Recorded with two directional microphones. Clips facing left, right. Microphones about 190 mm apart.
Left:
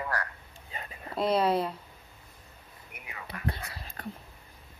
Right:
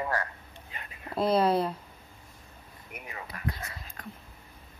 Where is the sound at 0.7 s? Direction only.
30° left (ahead or behind).